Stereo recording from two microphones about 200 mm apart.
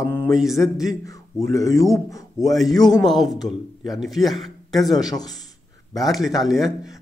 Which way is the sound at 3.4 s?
Centre (ahead or behind).